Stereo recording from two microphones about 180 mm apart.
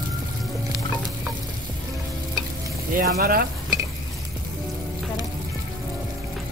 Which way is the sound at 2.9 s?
55° right (ahead or behind).